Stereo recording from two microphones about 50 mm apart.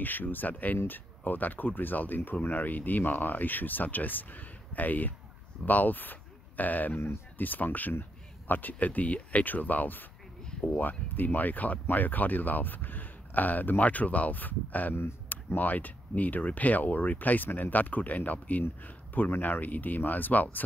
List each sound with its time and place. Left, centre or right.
0.0 s speech: left